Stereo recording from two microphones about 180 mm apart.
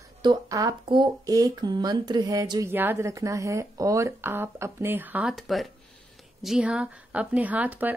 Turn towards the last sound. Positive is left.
turn(degrees=-10)  # may be behind; listen again after turning